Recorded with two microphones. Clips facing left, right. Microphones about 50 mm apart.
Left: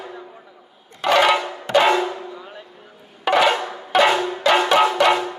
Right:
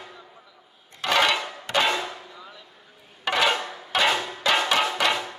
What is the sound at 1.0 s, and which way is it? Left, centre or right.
Music, centre.